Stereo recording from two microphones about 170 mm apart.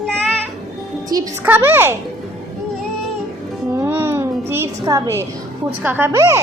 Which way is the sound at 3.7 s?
15° right (ahead or behind).